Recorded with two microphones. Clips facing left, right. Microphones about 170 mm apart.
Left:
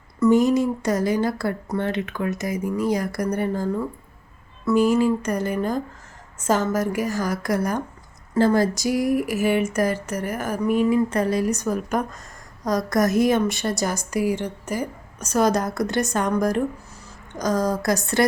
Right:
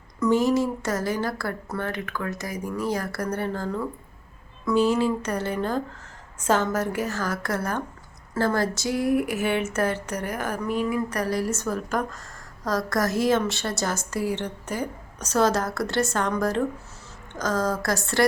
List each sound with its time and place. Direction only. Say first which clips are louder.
0.2 s a woman's voice: left 4 dB; 15° left (ahead or behind)
10.8 s a woman's voice: left 6 dB; 25° left (ahead or behind)